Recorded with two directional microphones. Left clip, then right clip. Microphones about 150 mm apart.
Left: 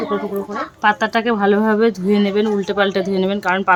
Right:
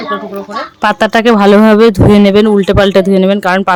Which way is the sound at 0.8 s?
90° right.